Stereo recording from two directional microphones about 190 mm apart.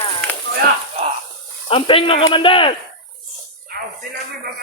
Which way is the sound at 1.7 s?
30° left (ahead or behind).